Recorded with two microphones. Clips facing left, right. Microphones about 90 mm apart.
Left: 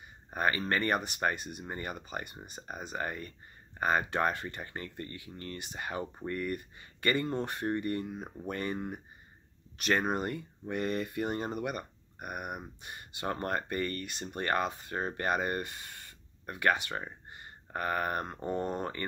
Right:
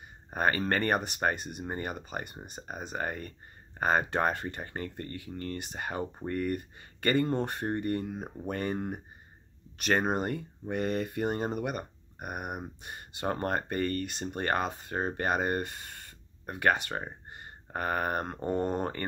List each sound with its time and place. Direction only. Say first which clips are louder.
0.3 s speech: right 2 dB; 30° right (ahead or behind)
0.6 s speech: right 2 dB; 45° right (ahead or behind)
0.8 s speech: right 2 dB; 25° right (ahead or behind)
8.7 s speech: right 3 dB; 45° right (ahead or behind)
9.8 s speech: right 2 dB; 25° right (ahead or behind)